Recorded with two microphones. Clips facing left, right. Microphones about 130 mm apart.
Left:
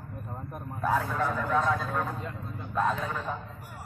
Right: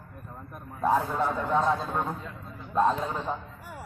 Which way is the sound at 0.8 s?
25° right (ahead or behind).